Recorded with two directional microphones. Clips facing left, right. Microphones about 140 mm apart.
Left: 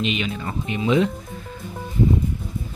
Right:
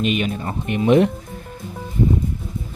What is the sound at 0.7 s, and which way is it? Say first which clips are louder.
Speech: right 5 dB; 60° right (ahead or behind).